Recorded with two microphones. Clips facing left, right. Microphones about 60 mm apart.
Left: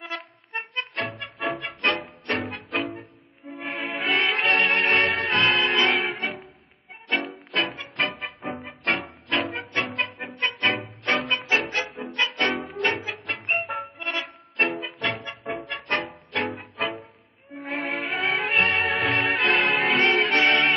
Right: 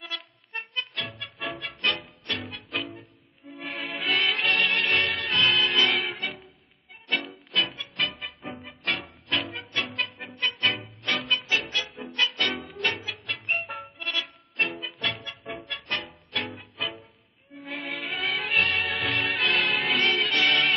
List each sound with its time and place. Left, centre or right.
0.0 s music: left
1.6 s music: left
3.4 s music: left
4.0 s music: left